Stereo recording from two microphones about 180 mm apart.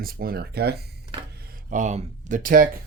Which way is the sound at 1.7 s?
45° right (ahead or behind).